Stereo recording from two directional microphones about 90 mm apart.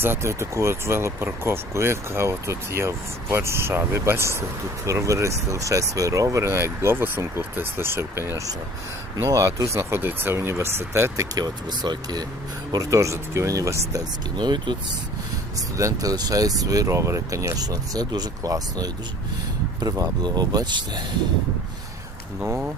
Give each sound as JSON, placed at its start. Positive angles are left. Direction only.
{"t": 0.0, "sound": "speech", "side_deg": -30}
{"t": 11.3, "sound": "speech", "side_deg": -50}
{"t": 12.7, "sound": "speech", "side_deg": -40}
{"t": 14.3, "sound": "speech", "side_deg": -55}
{"t": 15.5, "sound": "speech", "side_deg": -35}